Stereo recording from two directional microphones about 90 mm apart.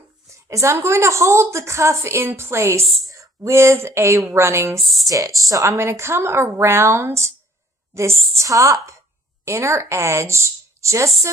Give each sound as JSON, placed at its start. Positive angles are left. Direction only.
{"t": 0.4, "sound": "a woman's voice", "side_deg": -35}